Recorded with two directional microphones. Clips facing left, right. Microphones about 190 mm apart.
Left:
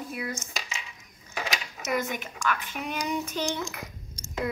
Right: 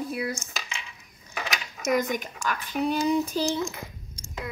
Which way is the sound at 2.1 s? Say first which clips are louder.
Right 1 dB; 40° right (ahead or behind).